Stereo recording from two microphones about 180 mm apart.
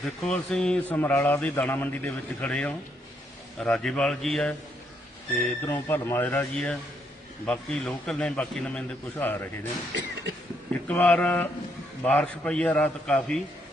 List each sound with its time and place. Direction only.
0.0 s a man's voice: centre (ahead or behind)
10.8 s a man's voice: 5° left (ahead or behind)